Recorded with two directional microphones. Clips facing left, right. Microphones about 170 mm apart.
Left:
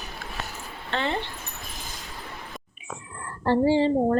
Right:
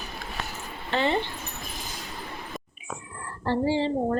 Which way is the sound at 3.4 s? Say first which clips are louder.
Left 4 dB; 50° left (ahead or behind).